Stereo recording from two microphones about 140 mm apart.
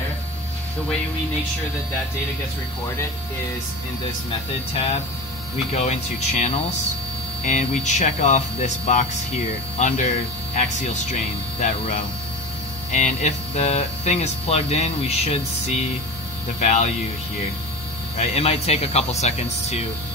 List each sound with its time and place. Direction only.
5.7 s speech: 50° left (ahead or behind)
18.1 s speech: 45° left (ahead or behind)